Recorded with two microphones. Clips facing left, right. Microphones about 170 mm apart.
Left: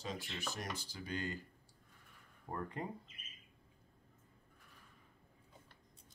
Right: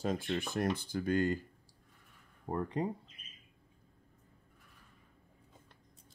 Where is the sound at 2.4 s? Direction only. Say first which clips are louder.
Right 8 dB; 30° right (ahead or behind).